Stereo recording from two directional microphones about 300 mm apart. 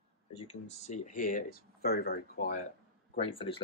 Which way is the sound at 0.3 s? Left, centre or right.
Centre.